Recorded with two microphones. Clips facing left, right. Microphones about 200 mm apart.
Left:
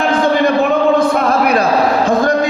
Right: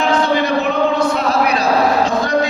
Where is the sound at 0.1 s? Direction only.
55° left (ahead or behind).